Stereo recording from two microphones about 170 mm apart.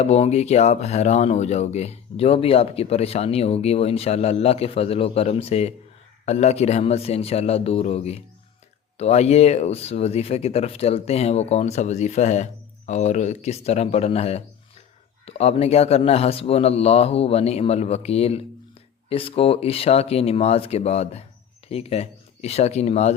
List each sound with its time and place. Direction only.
0.0 s speech: 40° left (ahead or behind)